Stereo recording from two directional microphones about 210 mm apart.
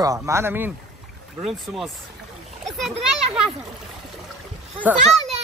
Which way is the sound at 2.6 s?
Centre (ahead or behind).